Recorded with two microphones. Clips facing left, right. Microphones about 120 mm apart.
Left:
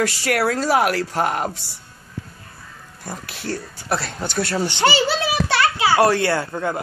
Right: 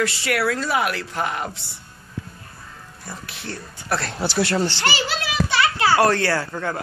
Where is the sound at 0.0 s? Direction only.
40° left (ahead or behind).